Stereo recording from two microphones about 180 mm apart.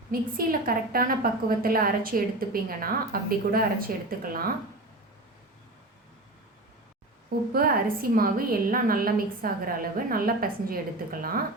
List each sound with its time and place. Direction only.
0.1 s a woman's voice: 50° right (ahead or behind)
7.5 s a woman's voice: 55° right (ahead or behind)